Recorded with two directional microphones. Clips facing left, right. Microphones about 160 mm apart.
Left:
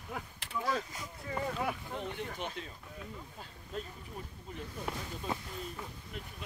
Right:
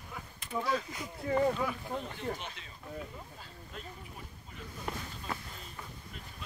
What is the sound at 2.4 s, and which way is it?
Speech, 45° left (ahead or behind).